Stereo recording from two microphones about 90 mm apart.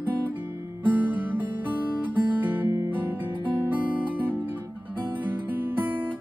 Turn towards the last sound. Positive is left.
turn(degrees=-20)  # may be behind; listen again after turning